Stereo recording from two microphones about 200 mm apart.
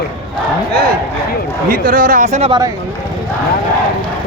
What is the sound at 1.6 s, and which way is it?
Speech, 45° right (ahead or behind).